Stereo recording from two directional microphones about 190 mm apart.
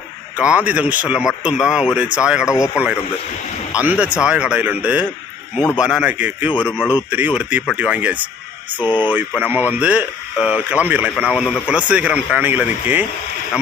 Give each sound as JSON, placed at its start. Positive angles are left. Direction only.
{"t": 0.3, "sound": "speech", "side_deg": -5}
{"t": 8.8, "sound": "speech", "side_deg": 25}
{"t": 9.0, "sound": "speech", "side_deg": -10}
{"t": 11.7, "sound": "speech", "side_deg": -5}